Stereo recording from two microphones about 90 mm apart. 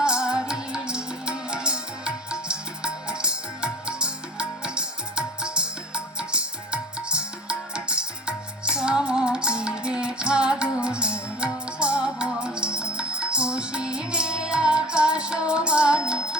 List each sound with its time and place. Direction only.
0.0 s music: 10° right (ahead or behind)